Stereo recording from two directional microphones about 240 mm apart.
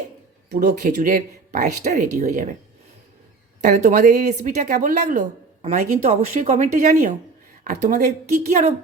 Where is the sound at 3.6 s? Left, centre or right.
Right.